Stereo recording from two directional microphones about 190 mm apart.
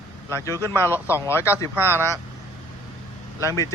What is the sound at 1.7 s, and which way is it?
Speech, 10° right (ahead or behind).